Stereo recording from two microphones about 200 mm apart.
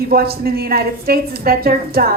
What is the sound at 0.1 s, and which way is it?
A woman's voice, 50° right (ahead or behind).